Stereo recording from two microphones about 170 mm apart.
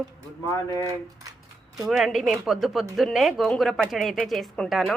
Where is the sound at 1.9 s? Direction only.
Centre (ahead or behind).